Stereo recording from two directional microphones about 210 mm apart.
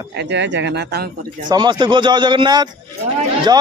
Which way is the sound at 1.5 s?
20° right (ahead or behind).